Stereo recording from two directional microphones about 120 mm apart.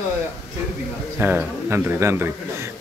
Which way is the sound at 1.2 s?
15° right (ahead or behind).